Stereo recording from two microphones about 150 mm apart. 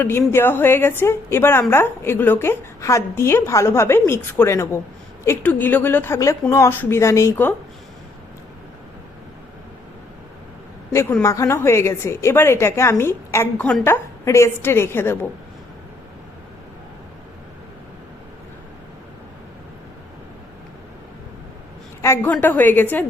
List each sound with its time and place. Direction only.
0.0 s a woman's voice: 15° left (ahead or behind)
11.2 s a woman's voice: 20° left (ahead or behind)
22.0 s a woman's voice: 15° left (ahead or behind)